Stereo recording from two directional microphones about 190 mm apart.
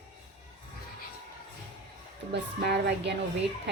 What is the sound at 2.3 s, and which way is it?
A woman's voice, 60° right (ahead or behind).